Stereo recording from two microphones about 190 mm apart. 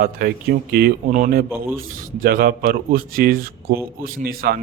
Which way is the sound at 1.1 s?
40° right (ahead or behind).